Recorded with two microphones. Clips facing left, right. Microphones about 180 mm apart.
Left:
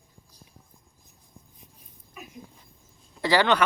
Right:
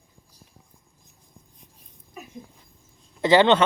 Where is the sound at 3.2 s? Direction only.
20° right (ahead or behind).